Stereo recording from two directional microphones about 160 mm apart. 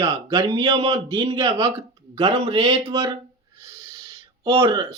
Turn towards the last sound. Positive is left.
turn(degrees=-30)  # may be behind; listen again after turning